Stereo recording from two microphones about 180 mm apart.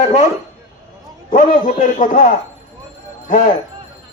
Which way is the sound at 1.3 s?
45° left (ahead or behind).